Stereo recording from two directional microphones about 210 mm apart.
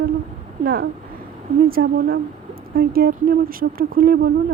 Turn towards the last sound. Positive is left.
turn(degrees=-45)  # may be behind; listen again after turning